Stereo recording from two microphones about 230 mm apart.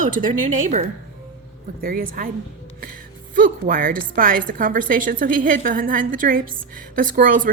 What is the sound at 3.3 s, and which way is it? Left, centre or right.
Speech, right.